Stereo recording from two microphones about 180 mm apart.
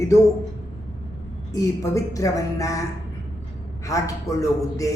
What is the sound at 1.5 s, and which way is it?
Speech, 20° left (ahead or behind).